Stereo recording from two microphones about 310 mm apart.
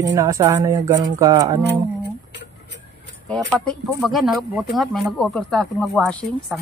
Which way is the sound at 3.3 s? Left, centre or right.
Centre.